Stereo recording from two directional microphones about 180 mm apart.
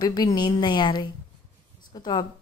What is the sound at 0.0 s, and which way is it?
A woman's voice, 25° left (ahead or behind).